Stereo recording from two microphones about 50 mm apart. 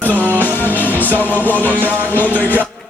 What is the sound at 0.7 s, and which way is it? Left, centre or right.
Music, left.